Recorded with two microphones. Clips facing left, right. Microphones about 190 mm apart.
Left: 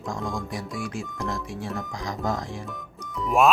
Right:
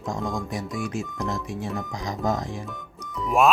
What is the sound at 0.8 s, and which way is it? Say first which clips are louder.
Speech: right 2 dB; 20° right (ahead or behind).